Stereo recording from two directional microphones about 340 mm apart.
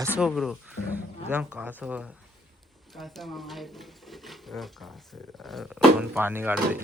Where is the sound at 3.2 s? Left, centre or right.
Centre.